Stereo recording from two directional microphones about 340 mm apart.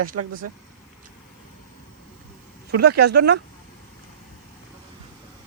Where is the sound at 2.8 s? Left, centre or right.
Right.